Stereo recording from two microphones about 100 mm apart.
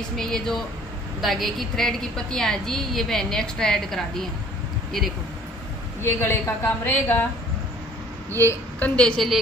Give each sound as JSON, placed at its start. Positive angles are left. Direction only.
{"t": 0.2, "sound": "a woman's voice", "side_deg": 5}
{"t": 6.0, "sound": "a woman's voice", "side_deg": 20}
{"t": 8.5, "sound": "a woman's voice", "side_deg": 15}